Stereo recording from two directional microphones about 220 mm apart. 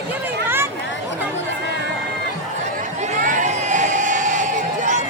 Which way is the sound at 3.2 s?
35° right (ahead or behind).